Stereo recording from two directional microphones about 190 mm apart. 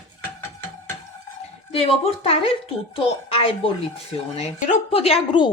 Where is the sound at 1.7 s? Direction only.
30° left (ahead or behind).